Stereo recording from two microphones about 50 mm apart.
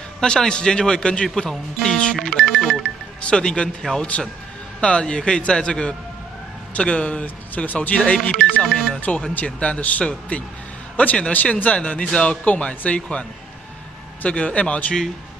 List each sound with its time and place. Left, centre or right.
0.2 s speech: centre
2.3 s music: centre
3.2 s speech: left
8.7 s speech: centre
9.0 s speech: left